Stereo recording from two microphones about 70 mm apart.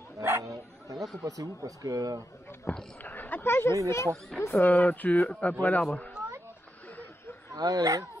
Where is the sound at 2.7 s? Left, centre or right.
Left.